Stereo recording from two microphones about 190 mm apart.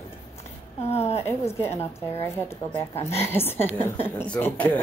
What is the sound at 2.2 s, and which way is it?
A woman's voice, 15° left (ahead or behind).